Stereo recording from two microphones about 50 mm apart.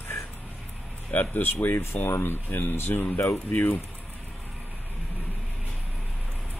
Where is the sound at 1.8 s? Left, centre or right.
Left.